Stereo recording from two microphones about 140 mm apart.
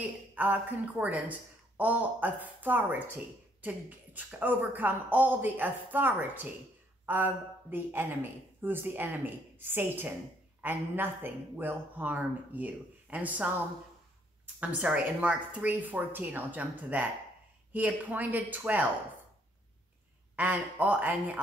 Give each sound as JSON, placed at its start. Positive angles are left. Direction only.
{"t": 0.3, "sound": "speech", "side_deg": -10}
{"t": 14.6, "sound": "speech", "side_deg": -10}
{"t": 20.3, "sound": "speech", "side_deg": -10}